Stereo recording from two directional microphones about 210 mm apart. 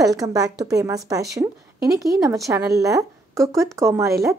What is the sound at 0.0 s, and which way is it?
A woman's voice, 15° right (ahead or behind).